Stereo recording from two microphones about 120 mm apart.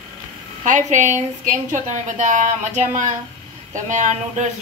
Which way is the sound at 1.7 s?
90° right.